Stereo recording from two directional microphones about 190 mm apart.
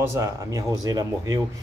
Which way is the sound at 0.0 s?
15° right (ahead or behind).